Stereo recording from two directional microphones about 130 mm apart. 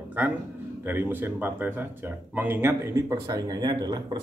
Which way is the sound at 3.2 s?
30° right (ahead or behind).